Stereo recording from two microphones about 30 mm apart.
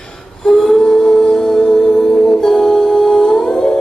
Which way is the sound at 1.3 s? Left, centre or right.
Centre.